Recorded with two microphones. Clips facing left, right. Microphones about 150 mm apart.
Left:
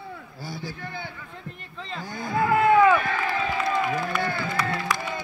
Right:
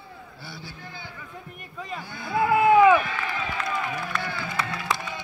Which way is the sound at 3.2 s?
30° left (ahead or behind).